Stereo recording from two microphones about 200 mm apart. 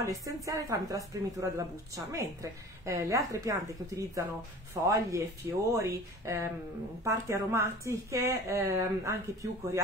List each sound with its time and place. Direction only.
0.0 s a woman's voice: 15° right (ahead or behind)